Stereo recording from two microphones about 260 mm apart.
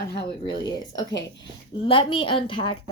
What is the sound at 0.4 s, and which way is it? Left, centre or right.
A woman's voice, centre.